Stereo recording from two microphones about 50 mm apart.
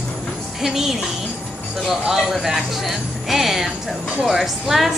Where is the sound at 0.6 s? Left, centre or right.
Centre.